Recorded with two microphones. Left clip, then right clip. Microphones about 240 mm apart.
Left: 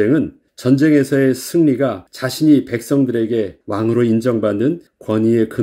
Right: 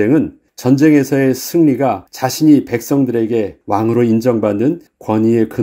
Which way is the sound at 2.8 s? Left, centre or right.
Right.